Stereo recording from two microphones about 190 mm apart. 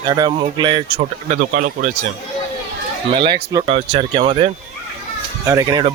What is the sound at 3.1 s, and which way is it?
Speech, 25° right (ahead or behind).